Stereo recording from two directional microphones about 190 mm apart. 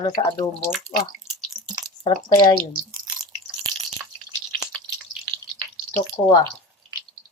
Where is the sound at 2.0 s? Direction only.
25° left (ahead or behind).